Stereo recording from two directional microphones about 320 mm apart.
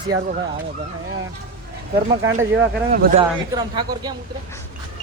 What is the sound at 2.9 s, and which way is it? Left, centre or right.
Speech, right.